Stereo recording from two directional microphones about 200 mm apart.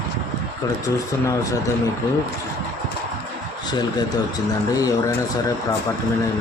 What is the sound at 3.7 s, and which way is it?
A man's voice, 20° left (ahead or behind).